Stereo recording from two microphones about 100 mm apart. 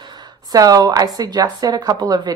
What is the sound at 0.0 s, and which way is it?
A woman's voice, 45° right (ahead or behind).